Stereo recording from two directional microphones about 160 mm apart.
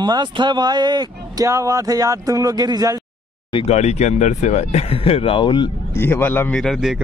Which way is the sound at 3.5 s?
35° left (ahead or behind).